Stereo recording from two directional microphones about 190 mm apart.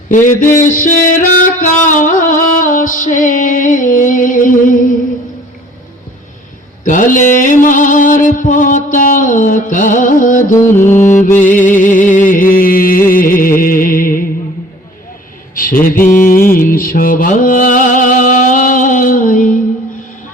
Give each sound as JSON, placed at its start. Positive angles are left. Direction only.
{"t": 0.1, "sound": "music", "side_deg": 45}
{"t": 6.8, "sound": "music", "side_deg": 45}
{"t": 15.5, "sound": "music", "side_deg": 45}